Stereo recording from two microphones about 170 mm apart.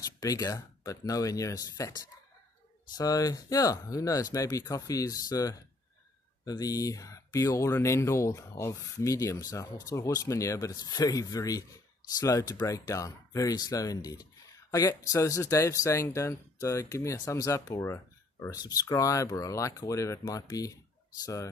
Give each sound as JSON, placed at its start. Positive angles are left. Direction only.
{"t": 0.0, "sound": "speech", "side_deg": 20}